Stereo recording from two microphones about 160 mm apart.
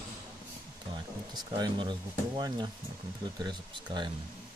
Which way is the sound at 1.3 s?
25° right (ahead or behind).